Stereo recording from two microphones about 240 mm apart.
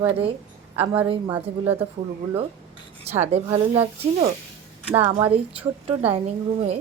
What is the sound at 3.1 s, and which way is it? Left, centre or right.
Speech, right.